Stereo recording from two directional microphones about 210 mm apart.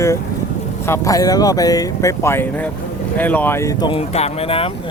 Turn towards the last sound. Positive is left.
turn(degrees=25)  # may be behind; listen again after turning